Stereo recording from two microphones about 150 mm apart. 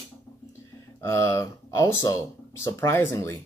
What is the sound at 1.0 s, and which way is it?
Speech, 20° left (ahead or behind).